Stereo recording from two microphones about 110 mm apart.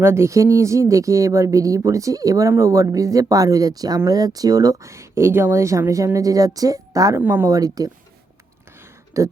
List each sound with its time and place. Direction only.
0.0 s speech: 25° right (ahead or behind)
7.2 s speech: 20° right (ahead or behind)
7.4 s speech: 30° right (ahead or behind)
9.2 s speech: 30° right (ahead or behind)